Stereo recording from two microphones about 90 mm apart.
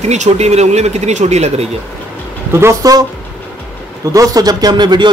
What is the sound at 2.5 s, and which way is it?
Speech, 30° right (ahead or behind).